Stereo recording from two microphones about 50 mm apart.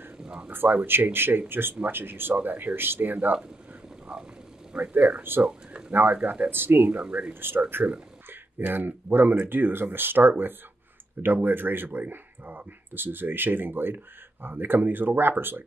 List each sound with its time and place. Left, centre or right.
0.2 s speech: centre
0.5 s speech: right
4.1 s frog: centre
4.9 s speech: right
5.4 s a sound: centre
5.9 s speech: right
6.9 s speech: right
7.3 s speech: right